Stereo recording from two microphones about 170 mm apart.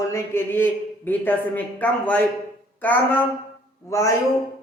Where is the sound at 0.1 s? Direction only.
15° left (ahead or behind).